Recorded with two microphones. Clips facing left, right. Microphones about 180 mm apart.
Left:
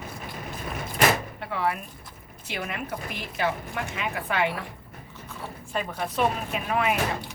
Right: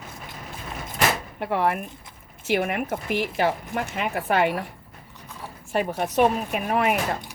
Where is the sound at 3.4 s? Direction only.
45° right (ahead or behind).